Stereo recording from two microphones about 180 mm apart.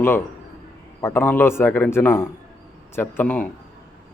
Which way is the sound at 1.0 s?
15° left (ahead or behind).